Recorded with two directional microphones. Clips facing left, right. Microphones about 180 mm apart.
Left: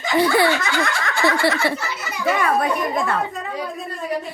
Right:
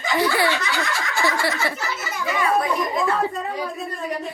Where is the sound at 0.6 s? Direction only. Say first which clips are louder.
Left 3 dB; 55° left (ahead or behind).